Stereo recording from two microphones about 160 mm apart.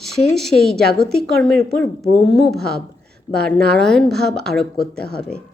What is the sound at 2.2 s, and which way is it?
A woman's voice, centre (ahead or behind).